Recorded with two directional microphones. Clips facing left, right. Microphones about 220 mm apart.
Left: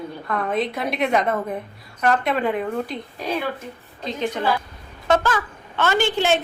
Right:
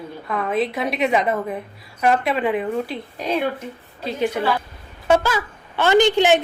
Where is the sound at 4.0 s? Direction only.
10° right (ahead or behind).